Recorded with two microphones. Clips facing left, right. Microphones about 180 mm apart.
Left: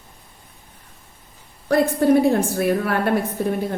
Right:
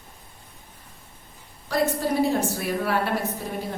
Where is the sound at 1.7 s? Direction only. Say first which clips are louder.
Left 8 dB; 55° left (ahead or behind).